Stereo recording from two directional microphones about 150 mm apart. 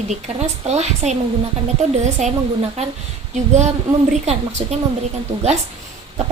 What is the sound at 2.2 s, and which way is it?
Speech, 50° right (ahead or behind).